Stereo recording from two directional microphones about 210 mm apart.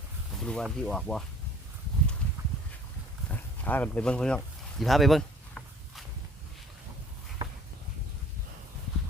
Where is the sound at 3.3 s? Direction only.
5° left (ahead or behind).